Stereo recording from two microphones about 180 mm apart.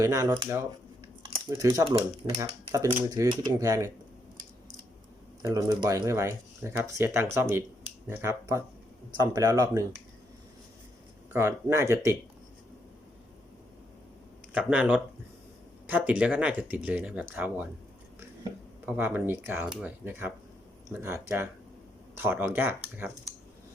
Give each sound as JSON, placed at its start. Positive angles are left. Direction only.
{"t": 0.0, "sound": "speech", "side_deg": -15}
{"t": 5.4, "sound": "speech", "side_deg": -20}
{"t": 11.3, "sound": "speech", "side_deg": -15}
{"t": 14.7, "sound": "speech", "side_deg": -5}
{"t": 18.9, "sound": "speech", "side_deg": -10}